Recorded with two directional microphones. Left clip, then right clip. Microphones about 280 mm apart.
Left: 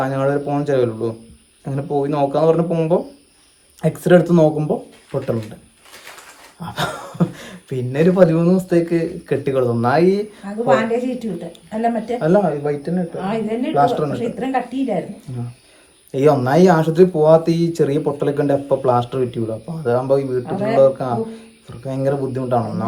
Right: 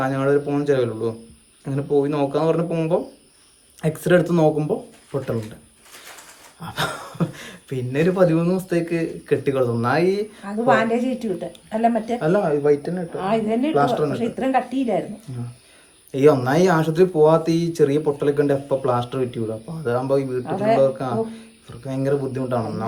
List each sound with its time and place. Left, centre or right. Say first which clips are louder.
0.0 s speech: left 1 dB; centre
6.6 s speech: left 2 dB; centre
10.4 s a woman's voice: left 1 dB; centre
12.2 s speech: left 2 dB; centre
13.1 s a woman's voice: right 4 dB; centre
13.7 s speech: left 4 dB; centre
14.1 s a woman's voice: even; centre
16.1 s speech: left 2 dB; centre